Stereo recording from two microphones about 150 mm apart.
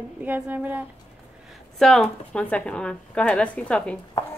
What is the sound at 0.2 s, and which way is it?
Speech, 10° right (ahead or behind).